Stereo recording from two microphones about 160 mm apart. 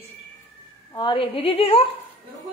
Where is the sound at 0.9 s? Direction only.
30° left (ahead or behind).